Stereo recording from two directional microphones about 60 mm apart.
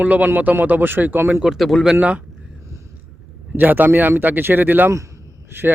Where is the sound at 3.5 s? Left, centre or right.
Right.